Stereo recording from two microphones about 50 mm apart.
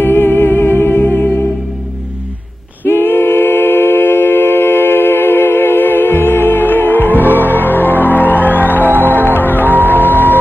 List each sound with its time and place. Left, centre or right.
0.0 s music: left
2.8 s a capella: left
9.7 s music: right
9.9 s music: left